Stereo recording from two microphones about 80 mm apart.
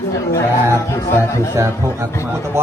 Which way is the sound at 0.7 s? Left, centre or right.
Left.